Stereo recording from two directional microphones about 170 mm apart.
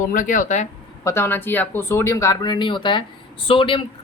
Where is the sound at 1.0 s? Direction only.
15° left (ahead or behind).